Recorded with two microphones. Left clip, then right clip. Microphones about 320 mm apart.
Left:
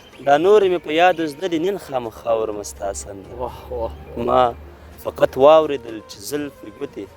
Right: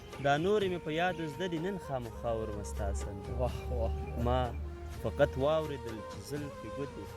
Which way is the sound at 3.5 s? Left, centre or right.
Centre.